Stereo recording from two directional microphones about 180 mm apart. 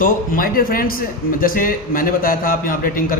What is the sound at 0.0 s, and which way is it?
A man's voice, 50° left (ahead or behind).